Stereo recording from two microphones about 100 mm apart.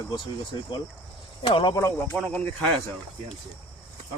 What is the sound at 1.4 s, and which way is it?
Speech, 55° left (ahead or behind).